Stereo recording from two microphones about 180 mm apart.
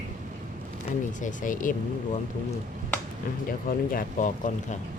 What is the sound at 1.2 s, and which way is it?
Speech, 45° left (ahead or behind).